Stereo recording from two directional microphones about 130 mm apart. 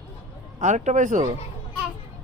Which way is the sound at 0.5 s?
70° right (ahead or behind).